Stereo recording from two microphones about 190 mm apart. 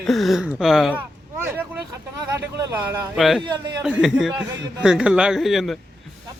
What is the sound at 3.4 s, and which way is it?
Speech, 25° right (ahead or behind).